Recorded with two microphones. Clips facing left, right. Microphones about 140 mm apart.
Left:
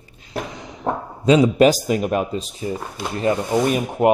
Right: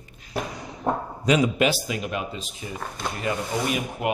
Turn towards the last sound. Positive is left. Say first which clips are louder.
# left 8 dB
turn(degrees=40)  # may be behind; listen again after turning